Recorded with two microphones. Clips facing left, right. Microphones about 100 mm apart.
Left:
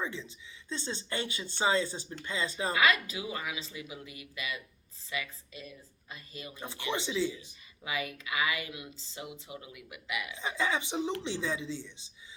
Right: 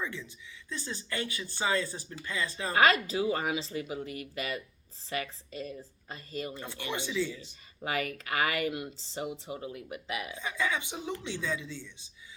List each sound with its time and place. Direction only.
0.0 s speech: 20° left (ahead or behind)
2.7 s speech: 40° right (ahead or behind)
6.6 s speech: 15° left (ahead or behind)
7.8 s speech: 50° right (ahead or behind)
9.0 s speech: 35° right (ahead or behind)
10.3 s speech: 20° left (ahead or behind)